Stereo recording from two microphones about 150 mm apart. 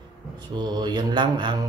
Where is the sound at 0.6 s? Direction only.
30° right (ahead or behind).